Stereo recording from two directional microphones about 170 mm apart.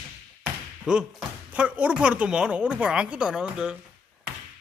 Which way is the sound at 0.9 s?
5° right (ahead or behind).